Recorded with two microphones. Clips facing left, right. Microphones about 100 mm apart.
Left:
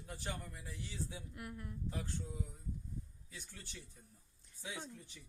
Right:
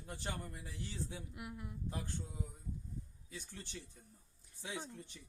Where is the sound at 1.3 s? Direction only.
15° right (ahead or behind).